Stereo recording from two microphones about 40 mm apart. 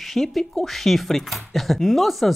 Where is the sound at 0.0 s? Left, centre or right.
Centre.